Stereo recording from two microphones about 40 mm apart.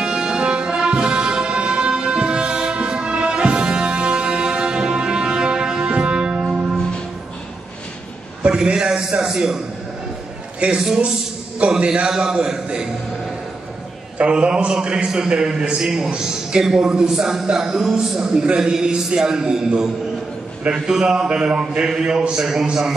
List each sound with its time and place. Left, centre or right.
0.0 s music: right
8.5 s a man's voice: centre
10.6 s a man's voice: right
11.8 s a man's voice: right
12.1 s a man's voice: centre
14.1 s a man's voice: right; by 18.3 s centre
18.3 s a man's voice: right
18.6 s a man's voice: centre